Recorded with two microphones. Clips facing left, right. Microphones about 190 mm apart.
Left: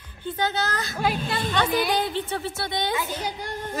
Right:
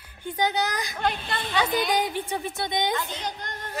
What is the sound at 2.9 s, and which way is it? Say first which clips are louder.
Speech: left 2 dB; 10° left (ahead or behind).